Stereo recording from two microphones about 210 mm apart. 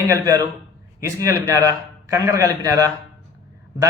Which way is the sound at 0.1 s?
15° right (ahead or behind).